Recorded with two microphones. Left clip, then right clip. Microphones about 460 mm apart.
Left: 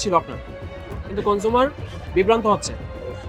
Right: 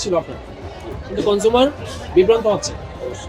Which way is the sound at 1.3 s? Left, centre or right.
Left.